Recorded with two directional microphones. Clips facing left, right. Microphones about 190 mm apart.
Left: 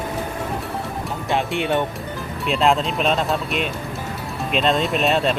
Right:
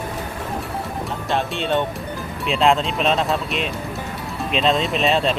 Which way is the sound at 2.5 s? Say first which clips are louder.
Right 1 dB; centre (ahead or behind).